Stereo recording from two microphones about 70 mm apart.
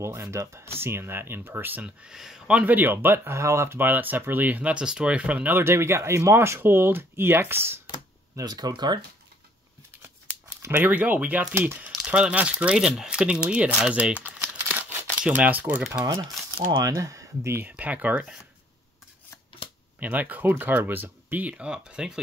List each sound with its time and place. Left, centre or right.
0.0 s speech: right
2.0 s speech: centre
2.7 s speech: right
3.3 s speech: right
5.6 s speech: right
8.4 s speech: right
10.7 s speech: right
13.7 s crumpling: centre
16.8 s speech: right
17.6 s speech: right
20.0 s speech: right